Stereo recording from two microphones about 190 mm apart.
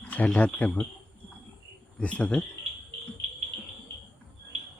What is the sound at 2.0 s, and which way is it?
Speech, 5° left (ahead or behind).